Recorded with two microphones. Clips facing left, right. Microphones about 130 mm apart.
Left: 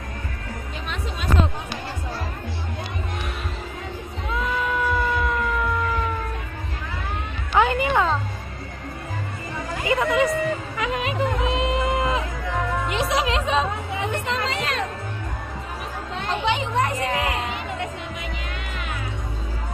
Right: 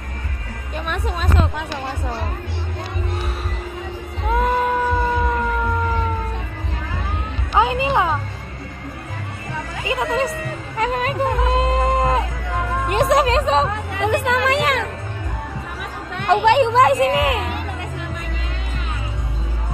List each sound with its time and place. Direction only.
4.3 s a sound: 50° right (ahead or behind)
4.8 s music: 35° right (ahead or behind)
7.5 s music: 20° right (ahead or behind)
9.9 s music: 20° right (ahead or behind)
10.8 s music: 40° right (ahead or behind)
12.8 s music: 50° right (ahead or behind)
13.9 s music: 75° right (ahead or behind)
16.2 s a sound: 60° right (ahead or behind); by 17.4 s 90° right